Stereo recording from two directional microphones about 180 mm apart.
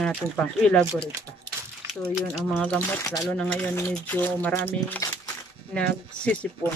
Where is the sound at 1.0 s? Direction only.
15° right (ahead or behind).